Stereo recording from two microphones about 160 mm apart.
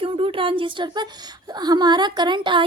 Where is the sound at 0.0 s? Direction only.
35° right (ahead or behind).